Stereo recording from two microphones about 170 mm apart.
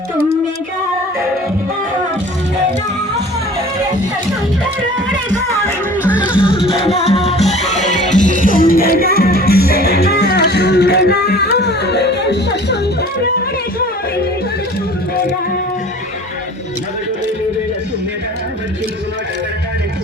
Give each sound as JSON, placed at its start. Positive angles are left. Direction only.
{"t": 6.0, "sound": "music", "side_deg": -10}
{"t": 6.3, "sound": "music", "side_deg": 30}